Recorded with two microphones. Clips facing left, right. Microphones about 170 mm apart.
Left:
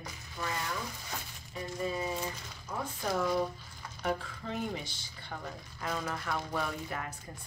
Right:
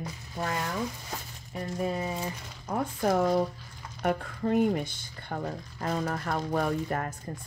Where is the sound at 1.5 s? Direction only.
60° right (ahead or behind).